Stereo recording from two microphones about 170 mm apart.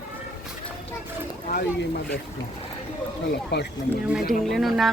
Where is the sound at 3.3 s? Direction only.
75° left (ahead or behind).